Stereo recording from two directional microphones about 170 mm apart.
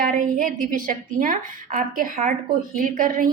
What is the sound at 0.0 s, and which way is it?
A woman's voice, 55° right (ahead or behind).